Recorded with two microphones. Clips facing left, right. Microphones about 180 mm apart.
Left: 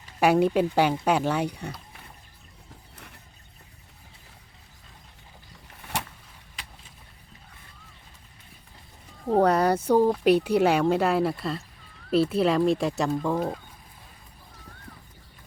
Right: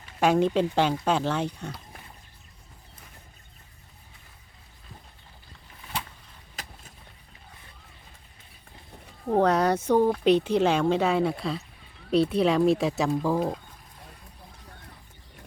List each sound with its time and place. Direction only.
0.2 s speech: 10° left (ahead or behind)
6.6 s vehicle: 45° right (ahead or behind)
9.3 s speech: 10° left (ahead or behind)